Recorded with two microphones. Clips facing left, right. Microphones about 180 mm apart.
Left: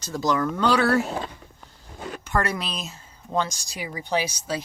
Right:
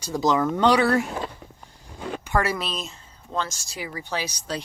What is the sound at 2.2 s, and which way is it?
Speech, 10° right (ahead or behind).